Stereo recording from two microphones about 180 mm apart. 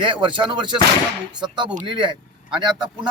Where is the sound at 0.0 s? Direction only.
25° right (ahead or behind).